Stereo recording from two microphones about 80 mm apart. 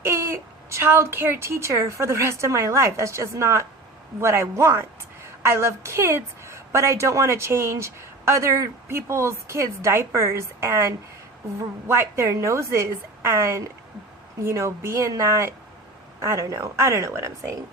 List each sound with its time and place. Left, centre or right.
0.0 s a woman's voice: right